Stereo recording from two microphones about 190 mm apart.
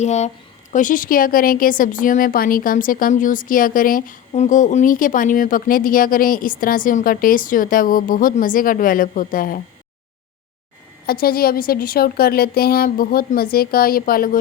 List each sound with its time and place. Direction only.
0.0 s a woman's voice: 35° left (ahead or behind)
11.0 s a woman's voice: 55° left (ahead or behind)